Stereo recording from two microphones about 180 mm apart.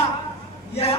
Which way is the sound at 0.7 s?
35° left (ahead or behind).